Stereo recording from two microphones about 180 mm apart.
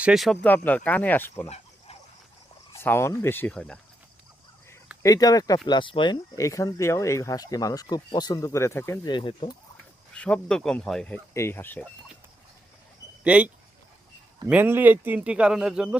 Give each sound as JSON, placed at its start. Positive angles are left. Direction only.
{"t": 0.0, "sound": "speech", "side_deg": 0}
{"t": 0.4, "sound": "speech", "side_deg": 10}
{"t": 2.8, "sound": "speech", "side_deg": 15}
{"t": 5.0, "sound": "speech", "side_deg": 20}
{"t": 9.0, "sound": "speech", "side_deg": 25}
{"t": 10.2, "sound": "speech", "side_deg": 5}
{"t": 13.2, "sound": "speech", "side_deg": -5}